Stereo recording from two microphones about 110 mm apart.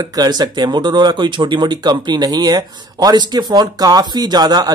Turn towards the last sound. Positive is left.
turn(degrees=-35)  # may be behind; listen again after turning